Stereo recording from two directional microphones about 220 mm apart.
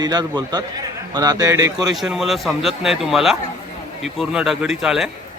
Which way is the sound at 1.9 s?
Centre (ahead or behind).